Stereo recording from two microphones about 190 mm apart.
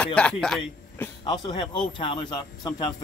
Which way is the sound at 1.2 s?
25° left (ahead or behind).